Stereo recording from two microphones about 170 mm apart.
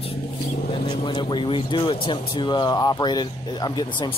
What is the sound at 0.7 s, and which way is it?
Speech, 30° left (ahead or behind).